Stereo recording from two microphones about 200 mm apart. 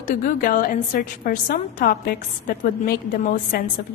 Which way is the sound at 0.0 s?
45° left (ahead or behind).